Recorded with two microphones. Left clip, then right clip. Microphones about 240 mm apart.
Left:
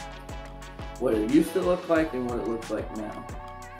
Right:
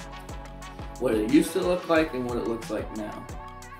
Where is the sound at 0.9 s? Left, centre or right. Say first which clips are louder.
Even; centre.